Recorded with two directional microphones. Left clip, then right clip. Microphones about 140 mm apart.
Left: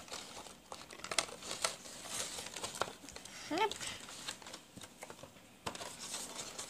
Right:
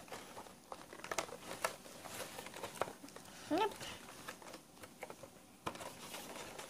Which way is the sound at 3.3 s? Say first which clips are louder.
Left 1 dB; 55° right (ahead or behind).